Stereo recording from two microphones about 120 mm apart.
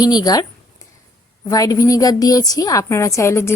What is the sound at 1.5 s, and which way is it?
A woman's voice, 30° left (ahead or behind).